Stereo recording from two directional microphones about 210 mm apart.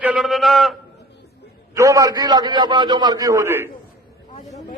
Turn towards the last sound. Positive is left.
turn(degrees=-15)  # may be behind; listen again after turning